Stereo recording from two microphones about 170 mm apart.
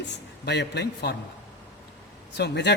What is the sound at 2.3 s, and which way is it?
Speech, 80° left.